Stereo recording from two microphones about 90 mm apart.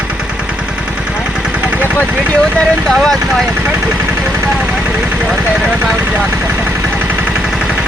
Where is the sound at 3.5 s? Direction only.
25° right (ahead or behind).